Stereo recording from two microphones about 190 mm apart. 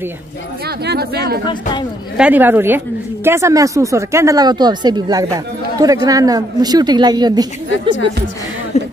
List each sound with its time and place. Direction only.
0.7 s speech: 55° right (ahead or behind)
1.4 s speech: 25° left (ahead or behind)
2.1 s a woman's voice: 10° right (ahead or behind)
8.7 s a sound: 35° left (ahead or behind)